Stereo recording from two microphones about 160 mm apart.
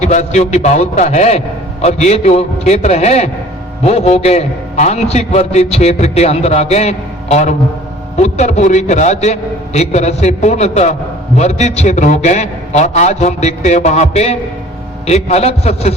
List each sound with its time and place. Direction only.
0.0 s a man's voice: 45° left (ahead or behind)